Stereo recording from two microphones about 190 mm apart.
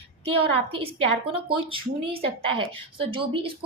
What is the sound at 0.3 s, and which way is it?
Speech, 30° right (ahead or behind).